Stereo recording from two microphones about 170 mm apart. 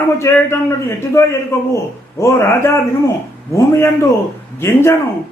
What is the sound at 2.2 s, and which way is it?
Speech, 15° left (ahead or behind).